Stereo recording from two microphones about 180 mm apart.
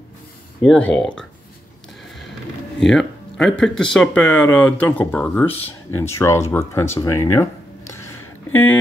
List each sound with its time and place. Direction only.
0.6 s speech: 5° left (ahead or behind)
2.8 s speech: 5° left (ahead or behind)